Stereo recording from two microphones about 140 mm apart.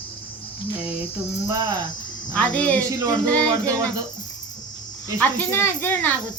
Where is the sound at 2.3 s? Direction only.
10° left (ahead or behind).